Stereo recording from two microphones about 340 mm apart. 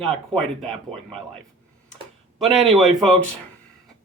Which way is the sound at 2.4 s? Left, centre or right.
Centre.